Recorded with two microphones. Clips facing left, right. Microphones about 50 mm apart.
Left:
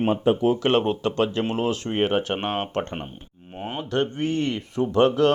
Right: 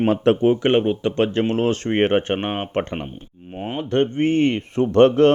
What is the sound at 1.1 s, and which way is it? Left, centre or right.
Speech, right.